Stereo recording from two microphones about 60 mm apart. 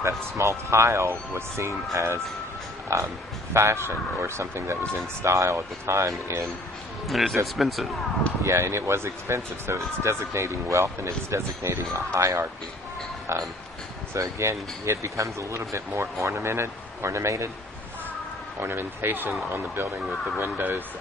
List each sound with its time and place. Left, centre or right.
0.0 s speech: right
2.9 s speech: right
7.1 s speech: centre
8.5 s speech: right
18.6 s speech: right